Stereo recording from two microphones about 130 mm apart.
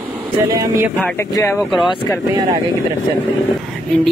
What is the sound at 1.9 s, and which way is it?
Speech, 35° left (ahead or behind).